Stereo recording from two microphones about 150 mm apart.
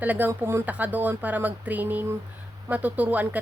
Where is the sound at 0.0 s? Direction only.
10° right (ahead or behind).